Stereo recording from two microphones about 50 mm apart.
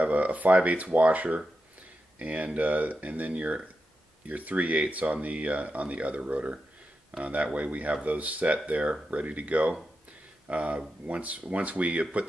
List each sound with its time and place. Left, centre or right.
0.0 s speech: right